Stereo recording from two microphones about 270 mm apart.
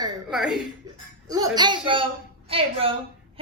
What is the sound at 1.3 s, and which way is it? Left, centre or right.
A woman's voice, centre.